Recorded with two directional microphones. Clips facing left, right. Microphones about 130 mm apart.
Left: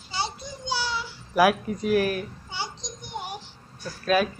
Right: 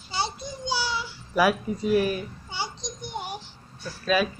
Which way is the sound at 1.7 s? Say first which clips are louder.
Right 1 dB; 65° left (ahead or behind).